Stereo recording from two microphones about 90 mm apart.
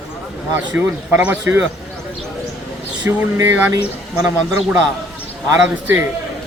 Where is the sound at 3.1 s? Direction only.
25° right (ahead or behind).